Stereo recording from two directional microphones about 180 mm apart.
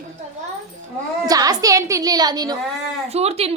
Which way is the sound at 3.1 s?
35° right (ahead or behind).